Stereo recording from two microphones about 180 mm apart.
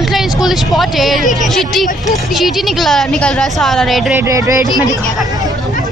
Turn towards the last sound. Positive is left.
turn(degrees=-15)  # may be behind; listen again after turning